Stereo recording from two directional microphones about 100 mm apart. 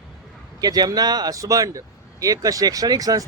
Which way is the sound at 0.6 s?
40° right (ahead or behind).